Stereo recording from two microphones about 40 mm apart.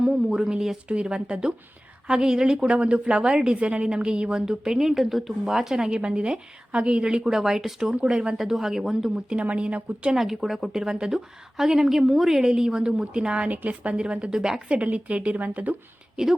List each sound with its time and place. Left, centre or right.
0.3 s a woman's voice: centre
3.5 s a woman's voice: right; by 6.0 s centre
6.0 s a woman's voice: right
7.3 s a woman's voice: centre
8.4 s a woman's voice: centre
9.1 s a woman's voice: right
10.2 s a woman's voice: centre
14.7 s a woman's voice: right
16.2 s a woman's voice: centre